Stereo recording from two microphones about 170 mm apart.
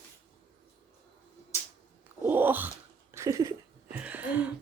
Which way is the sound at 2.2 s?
10° right (ahead or behind).